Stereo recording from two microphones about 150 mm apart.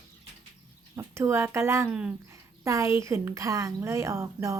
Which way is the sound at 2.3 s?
20° right (ahead or behind).